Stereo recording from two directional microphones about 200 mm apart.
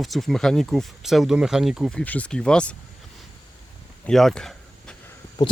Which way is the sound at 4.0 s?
Centre (ahead or behind).